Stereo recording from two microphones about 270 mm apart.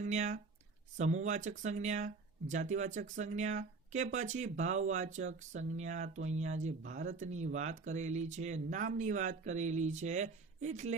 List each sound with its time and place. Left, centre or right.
0.0 s speech: right